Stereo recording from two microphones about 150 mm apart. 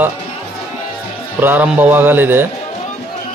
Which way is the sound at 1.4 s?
10° right (ahead or behind).